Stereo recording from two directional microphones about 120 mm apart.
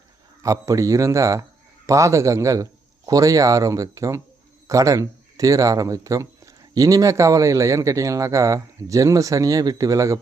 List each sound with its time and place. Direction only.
0.4 s speech: 30° right (ahead or behind)